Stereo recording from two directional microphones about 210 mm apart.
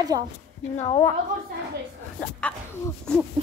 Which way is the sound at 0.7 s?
25° left (ahead or behind).